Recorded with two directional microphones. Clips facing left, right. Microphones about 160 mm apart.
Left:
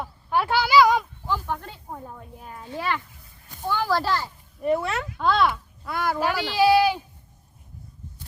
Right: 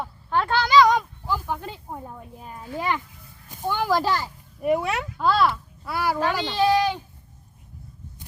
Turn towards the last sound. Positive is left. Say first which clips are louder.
# left 2 dB
turn(degrees=10)  # may be behind; listen again after turning